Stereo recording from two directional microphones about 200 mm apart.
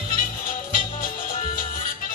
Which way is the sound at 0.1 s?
45° left (ahead or behind).